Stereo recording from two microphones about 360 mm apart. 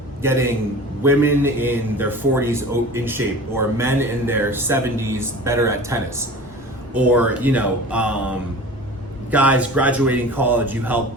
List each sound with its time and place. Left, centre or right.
0.2 s a man's voice: centre